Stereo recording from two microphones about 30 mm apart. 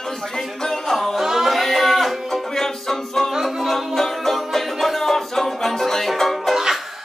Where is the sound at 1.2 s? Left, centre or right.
Centre.